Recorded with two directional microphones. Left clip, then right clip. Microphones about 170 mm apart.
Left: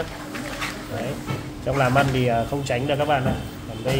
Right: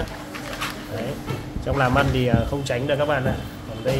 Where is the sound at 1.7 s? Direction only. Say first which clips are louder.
Even; 5° right (ahead or behind).